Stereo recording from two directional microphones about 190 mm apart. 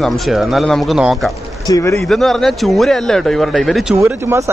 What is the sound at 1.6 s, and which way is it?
Speech, 15° left (ahead or behind).